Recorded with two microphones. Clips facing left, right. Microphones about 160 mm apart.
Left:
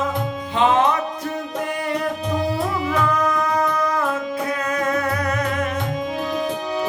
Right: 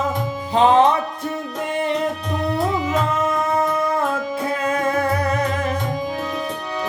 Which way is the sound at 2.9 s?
25° right (ahead or behind).